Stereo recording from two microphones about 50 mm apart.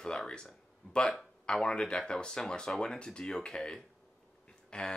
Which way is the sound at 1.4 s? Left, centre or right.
Centre.